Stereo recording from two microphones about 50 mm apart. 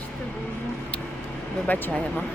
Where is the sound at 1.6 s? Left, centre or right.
Left.